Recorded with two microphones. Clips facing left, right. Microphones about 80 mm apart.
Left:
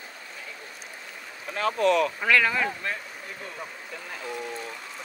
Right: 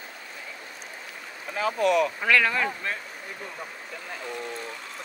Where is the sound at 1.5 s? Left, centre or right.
Centre.